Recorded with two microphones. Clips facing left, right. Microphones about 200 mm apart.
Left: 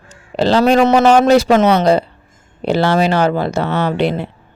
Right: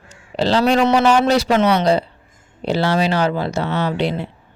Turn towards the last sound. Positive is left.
turn(degrees=55)  # may be behind; listen again after turning